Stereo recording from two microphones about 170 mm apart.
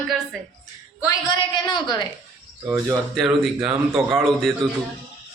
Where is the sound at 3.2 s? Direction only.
5° right (ahead or behind).